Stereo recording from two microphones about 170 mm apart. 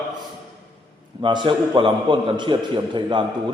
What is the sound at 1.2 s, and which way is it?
A man's voice, 30° right (ahead or behind).